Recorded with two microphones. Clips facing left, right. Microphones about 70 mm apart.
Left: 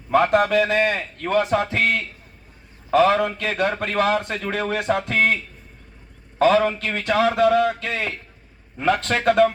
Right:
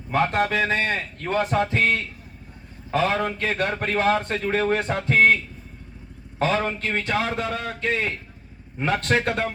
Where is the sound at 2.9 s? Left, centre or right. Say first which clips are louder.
Left 6 dB; left.